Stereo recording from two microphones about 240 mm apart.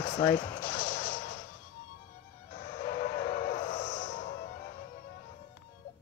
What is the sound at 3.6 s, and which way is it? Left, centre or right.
Music, left.